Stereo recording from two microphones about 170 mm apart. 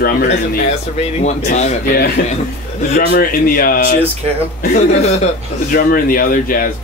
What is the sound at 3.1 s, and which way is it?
Speech, 55° left (ahead or behind).